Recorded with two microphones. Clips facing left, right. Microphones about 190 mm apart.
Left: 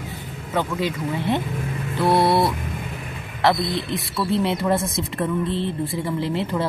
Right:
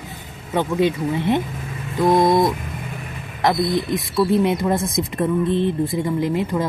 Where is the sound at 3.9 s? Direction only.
15° right (ahead or behind).